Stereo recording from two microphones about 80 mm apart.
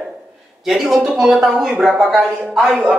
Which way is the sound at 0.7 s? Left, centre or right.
Centre.